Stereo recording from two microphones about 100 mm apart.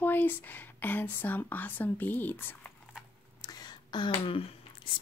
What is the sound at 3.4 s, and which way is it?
Whispering, 40° left (ahead or behind).